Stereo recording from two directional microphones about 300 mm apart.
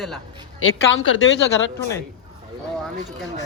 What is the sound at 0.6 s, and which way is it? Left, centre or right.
Speech, left.